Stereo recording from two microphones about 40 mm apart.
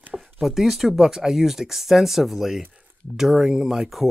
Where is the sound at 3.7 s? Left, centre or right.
Centre.